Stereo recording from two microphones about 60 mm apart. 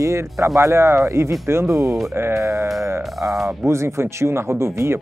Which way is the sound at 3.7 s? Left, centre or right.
Right.